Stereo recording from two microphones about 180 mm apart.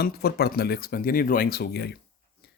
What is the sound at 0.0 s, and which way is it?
Speech, 60° left (ahead or behind).